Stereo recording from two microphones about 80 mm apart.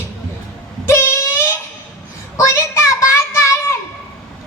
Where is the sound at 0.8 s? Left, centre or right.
Left.